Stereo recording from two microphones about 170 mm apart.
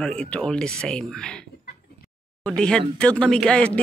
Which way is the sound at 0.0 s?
5° left (ahead or behind).